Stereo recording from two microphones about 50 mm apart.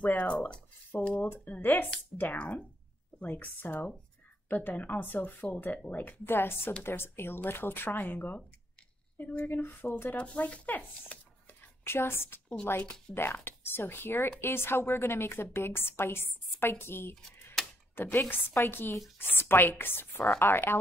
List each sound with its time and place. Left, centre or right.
0.0 s a sound: left
1.0 s speech: left
1.4 s a woman's voice: left
9.5 s speech: left
10.1 s speech: left
11.8 s a woman's voice: left
17.6 s a sound: centre
18.0 s a woman's voice: left